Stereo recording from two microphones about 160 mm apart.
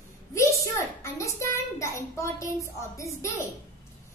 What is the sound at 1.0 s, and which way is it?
A child's voice, 20° left (ahead or behind).